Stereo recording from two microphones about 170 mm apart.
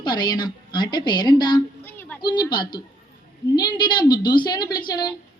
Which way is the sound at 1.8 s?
10° left (ahead or behind).